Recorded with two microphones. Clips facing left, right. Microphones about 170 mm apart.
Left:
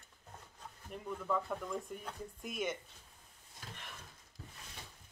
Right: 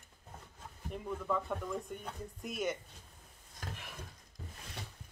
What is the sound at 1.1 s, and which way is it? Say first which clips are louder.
A woman's voice: right 1 dB; centre (ahead or behind).